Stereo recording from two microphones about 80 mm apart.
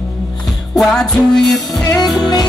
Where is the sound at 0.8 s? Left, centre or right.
Centre.